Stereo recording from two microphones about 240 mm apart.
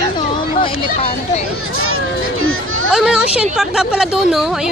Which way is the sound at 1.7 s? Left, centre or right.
Right.